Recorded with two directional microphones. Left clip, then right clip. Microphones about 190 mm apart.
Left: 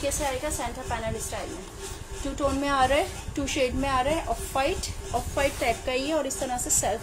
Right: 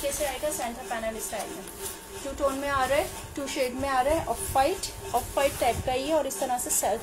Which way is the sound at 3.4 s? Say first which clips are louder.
Left 2 dB; 20° left (ahead or behind).